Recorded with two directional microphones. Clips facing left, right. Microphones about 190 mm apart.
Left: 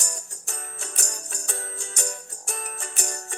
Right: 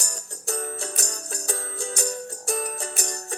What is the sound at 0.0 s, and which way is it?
Music, 35° right (ahead or behind).